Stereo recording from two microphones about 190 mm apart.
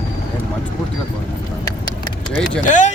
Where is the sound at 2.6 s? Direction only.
40° left (ahead or behind).